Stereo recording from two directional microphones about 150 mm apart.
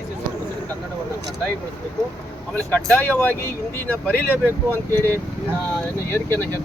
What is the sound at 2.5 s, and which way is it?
Speech, 10° left (ahead or behind).